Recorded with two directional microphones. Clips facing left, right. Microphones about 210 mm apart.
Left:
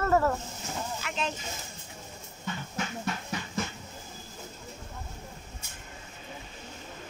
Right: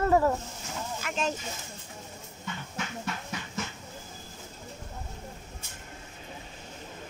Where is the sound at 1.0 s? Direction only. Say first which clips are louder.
Right 5 dB; 45° right (ahead or behind).